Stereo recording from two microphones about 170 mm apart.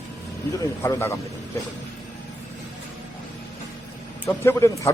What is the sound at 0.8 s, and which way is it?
Speech, 15° left (ahead or behind).